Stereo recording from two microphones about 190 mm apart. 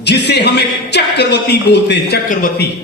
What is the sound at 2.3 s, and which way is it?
Speech, 45° left (ahead or behind).